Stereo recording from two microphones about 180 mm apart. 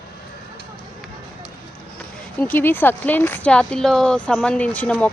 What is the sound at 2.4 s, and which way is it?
Speech, 10° left (ahead or behind).